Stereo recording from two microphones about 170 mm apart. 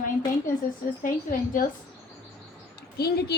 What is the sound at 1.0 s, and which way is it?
Speech, 50° left (ahead or behind).